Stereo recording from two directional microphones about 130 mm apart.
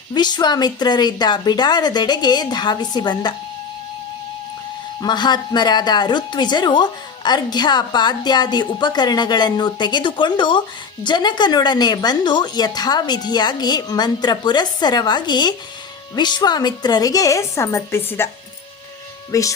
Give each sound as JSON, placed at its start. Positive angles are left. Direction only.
{"t": 0.1, "sound": "speech", "side_deg": 30}
{"t": 4.9, "sound": "a woman's voice", "side_deg": 35}
{"t": 19.3, "sound": "a woman's voice", "side_deg": 25}